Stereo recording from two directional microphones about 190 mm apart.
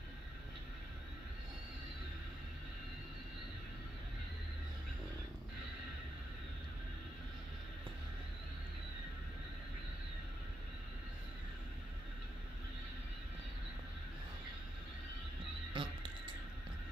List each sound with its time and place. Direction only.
15.7 s music: 25° right (ahead or behind)